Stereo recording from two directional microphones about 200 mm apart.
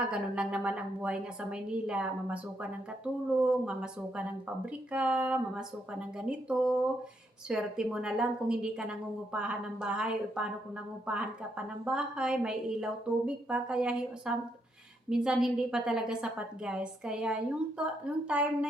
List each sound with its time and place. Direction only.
0.1 s a woman's voice: 5° right (ahead or behind)